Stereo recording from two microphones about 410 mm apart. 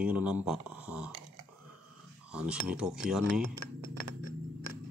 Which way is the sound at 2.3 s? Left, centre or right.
Centre.